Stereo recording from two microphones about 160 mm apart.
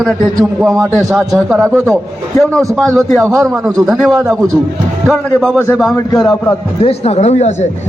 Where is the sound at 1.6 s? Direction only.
20° right (ahead or behind).